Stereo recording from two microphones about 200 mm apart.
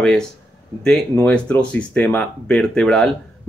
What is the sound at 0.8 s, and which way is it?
Speech, 5° left (ahead or behind).